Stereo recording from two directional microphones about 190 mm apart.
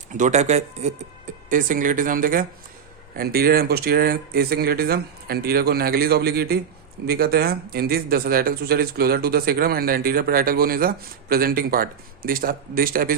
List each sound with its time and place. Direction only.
0.1 s speech: 40° right (ahead or behind)